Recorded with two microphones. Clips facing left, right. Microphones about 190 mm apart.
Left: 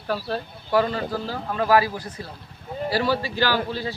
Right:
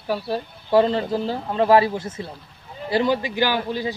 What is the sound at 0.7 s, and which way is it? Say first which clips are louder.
Speech: right 4 dB; 25° right (ahead or behind).